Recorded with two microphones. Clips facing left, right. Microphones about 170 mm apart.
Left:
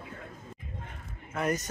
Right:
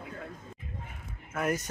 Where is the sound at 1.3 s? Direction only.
5° right (ahead or behind).